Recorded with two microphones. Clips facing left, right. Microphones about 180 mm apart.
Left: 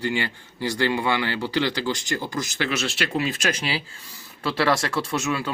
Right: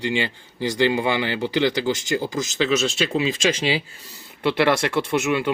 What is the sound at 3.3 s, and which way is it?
Speech, 90° right.